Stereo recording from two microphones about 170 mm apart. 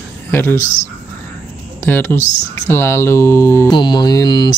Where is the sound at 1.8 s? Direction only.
10° left (ahead or behind).